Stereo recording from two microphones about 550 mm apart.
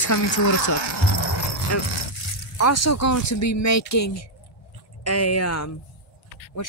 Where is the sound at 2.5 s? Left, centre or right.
Left.